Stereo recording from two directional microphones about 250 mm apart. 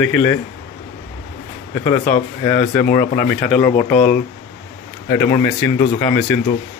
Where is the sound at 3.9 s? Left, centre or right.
Left.